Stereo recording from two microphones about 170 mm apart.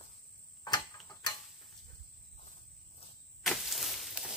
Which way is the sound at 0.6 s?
25° left (ahead or behind).